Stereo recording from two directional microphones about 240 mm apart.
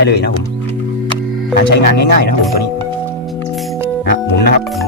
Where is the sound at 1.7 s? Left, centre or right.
Left.